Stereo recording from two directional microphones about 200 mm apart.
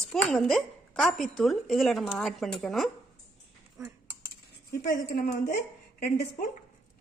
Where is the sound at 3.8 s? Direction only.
15° right (ahead or behind).